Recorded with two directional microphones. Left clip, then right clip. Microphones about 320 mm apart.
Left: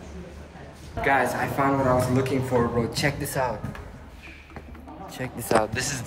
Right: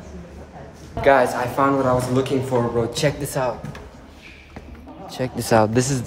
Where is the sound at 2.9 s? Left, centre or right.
Centre.